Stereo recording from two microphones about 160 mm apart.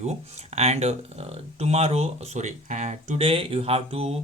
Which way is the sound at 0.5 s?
45° right (ahead or behind).